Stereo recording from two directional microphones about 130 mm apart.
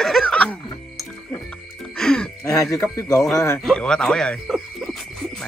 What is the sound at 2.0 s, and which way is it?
Music, 5° left (ahead or behind).